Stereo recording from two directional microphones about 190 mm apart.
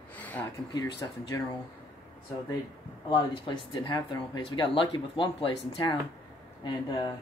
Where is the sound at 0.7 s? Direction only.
20° left (ahead or behind).